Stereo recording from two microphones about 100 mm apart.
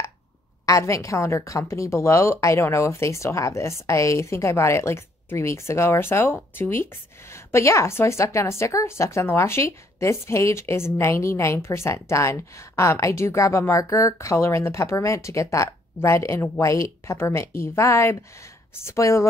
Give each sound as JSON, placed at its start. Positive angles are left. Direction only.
{"t": 0.7, "sound": "a woman's voice", "side_deg": 30}